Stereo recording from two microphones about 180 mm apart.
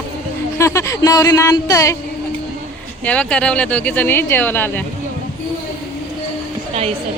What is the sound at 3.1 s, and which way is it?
Speech, 5° left (ahead or behind).